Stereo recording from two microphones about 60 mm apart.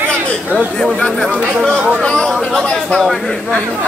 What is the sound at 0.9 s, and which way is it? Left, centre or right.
Speech, centre.